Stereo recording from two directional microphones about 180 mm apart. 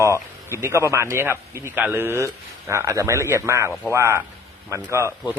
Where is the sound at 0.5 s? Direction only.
15° right (ahead or behind).